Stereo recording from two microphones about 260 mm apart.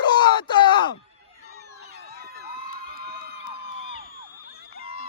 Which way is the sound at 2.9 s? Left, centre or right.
Right.